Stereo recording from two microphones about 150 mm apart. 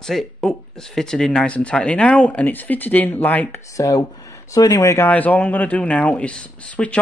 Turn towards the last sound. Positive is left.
turn(degrees=10)  # may be behind; listen again after turning